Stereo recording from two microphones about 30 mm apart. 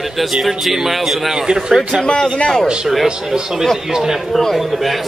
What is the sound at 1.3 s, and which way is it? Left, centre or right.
Speech, right.